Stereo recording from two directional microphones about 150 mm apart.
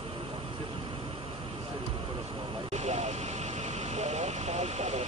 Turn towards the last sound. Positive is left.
turn(degrees=-45)  # may be behind; listen again after turning